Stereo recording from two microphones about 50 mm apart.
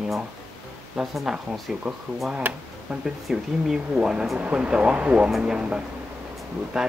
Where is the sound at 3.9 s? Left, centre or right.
Centre.